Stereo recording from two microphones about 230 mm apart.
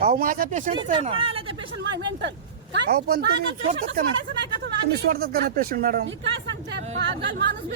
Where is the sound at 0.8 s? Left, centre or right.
Right.